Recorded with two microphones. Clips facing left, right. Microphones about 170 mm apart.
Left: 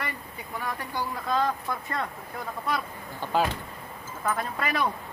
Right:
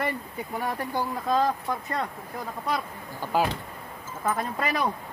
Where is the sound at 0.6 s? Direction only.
35° right (ahead or behind).